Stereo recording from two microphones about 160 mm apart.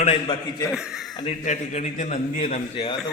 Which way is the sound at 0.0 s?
35° left (ahead or behind).